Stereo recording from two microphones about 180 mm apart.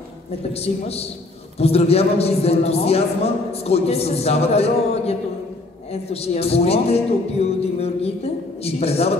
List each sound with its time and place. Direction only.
0.5 s a man's voice: 35° left (ahead or behind)